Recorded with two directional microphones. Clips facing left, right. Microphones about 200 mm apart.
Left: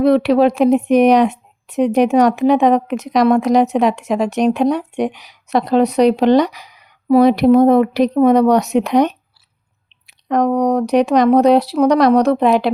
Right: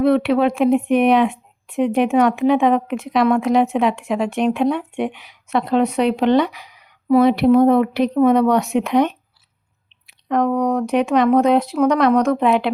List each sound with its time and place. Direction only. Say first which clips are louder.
0.0 s speech: left 3 dB; 40° left (ahead or behind)